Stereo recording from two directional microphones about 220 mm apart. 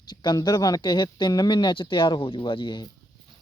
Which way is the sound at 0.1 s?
20° left (ahead or behind).